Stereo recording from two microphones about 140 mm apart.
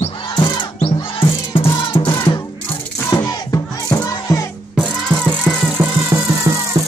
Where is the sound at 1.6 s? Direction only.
40° left (ahead or behind).